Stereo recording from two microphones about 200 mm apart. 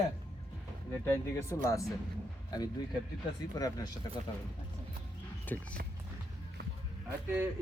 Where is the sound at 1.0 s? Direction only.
15° left (ahead or behind).